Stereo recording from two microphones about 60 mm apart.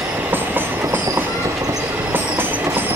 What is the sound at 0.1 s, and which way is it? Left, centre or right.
Train, right.